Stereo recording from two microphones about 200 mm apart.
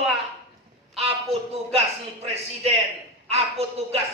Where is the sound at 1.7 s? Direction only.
30° right (ahead or behind).